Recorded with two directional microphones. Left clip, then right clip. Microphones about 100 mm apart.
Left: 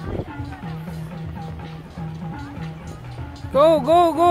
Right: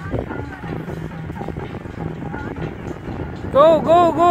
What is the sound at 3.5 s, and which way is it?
Speech, 30° left (ahead or behind).